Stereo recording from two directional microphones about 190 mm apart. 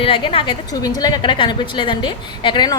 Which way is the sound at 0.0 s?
30° left (ahead or behind).